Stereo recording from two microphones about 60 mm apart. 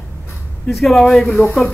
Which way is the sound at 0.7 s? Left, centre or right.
Centre.